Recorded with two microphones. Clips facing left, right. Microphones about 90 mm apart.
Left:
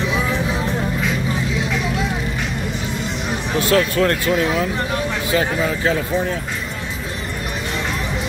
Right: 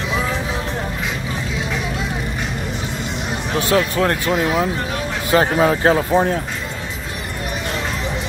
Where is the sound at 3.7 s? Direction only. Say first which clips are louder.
Left 1 dB; 20° right (ahead or behind).